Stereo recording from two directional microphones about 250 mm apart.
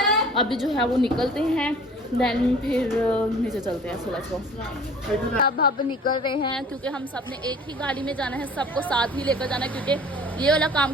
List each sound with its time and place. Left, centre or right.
0.0 s a sound: centre
1.1 s a woman's voice: centre
5.4 s a woman's voice: left
6.2 s speech: centre
7.8 s a woman's voice: centre